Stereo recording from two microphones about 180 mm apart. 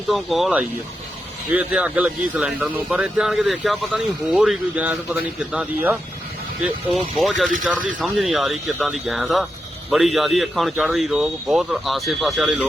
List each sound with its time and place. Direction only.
0.1 s speech: centre (ahead or behind)